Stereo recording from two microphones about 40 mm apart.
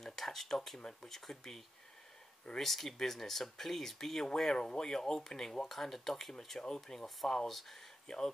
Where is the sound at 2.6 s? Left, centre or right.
Centre.